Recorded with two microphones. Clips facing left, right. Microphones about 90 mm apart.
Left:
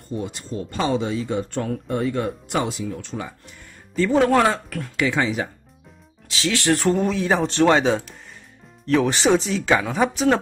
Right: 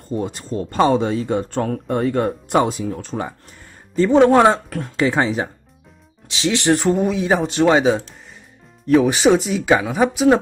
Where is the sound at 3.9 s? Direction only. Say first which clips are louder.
Right 5 dB; 25° right (ahead or behind).